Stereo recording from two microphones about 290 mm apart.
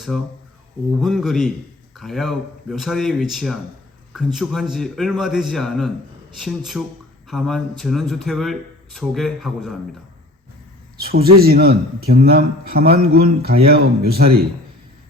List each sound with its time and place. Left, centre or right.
0.9 s speech: centre
11.3 s a man's voice: right